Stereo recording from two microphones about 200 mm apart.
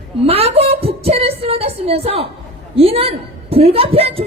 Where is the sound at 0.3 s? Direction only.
30° right (ahead or behind).